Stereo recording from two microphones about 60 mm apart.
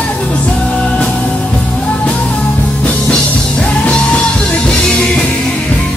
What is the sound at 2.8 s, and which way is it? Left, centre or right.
Music, left.